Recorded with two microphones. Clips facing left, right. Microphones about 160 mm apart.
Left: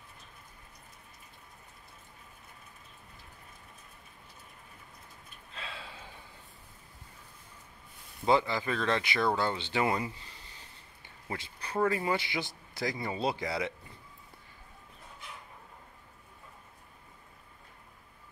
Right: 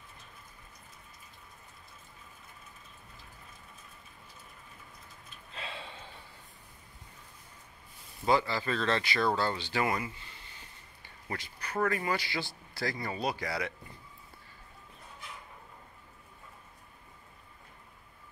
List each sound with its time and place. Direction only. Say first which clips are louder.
5.5 s a sound: right 2 dB; centre (ahead or behind)
8.3 s speech: left 1 dB; 20° left (ahead or behind)
11.2 s speech: even; 25° left (ahead or behind)